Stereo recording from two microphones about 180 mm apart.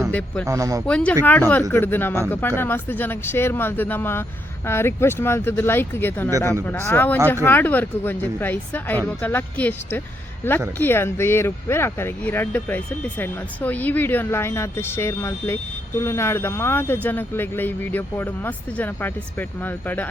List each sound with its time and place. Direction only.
0.1 s speech: 5° left (ahead or behind)
0.4 s speech: 20° right (ahead or behind)
0.9 s speech: 5° left (ahead or behind)